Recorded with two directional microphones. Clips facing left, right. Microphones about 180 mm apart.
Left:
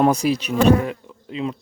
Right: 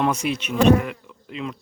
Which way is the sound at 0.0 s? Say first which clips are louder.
Left 5 dB; 35° left (ahead or behind).